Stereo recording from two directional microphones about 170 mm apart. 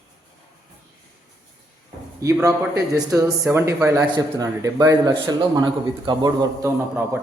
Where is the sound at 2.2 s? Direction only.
20° right (ahead or behind).